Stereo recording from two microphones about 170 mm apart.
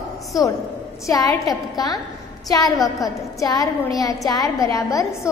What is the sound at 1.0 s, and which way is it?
A woman's voice, 20° left (ahead or behind).